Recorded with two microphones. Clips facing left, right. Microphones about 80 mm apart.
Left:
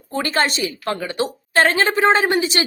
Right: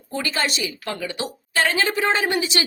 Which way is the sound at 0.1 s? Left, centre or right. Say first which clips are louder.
Left 5 dB; left.